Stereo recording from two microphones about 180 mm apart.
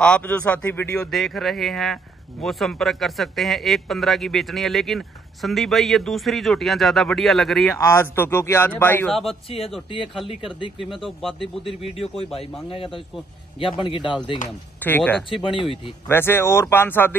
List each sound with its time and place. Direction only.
0.0 s a man's voice: 5° left (ahead or behind)
7.7 s speech: 15° left (ahead or behind)
9.1 s a man's voice: centre (ahead or behind)
10.8 s a man's voice: centre (ahead or behind)
11.8 s a man's voice: 35° left (ahead or behind)
14.8 s speech: 10° left (ahead or behind)
15.2 s speech: 30° left (ahead or behind)
16.1 s speech: 15° left (ahead or behind)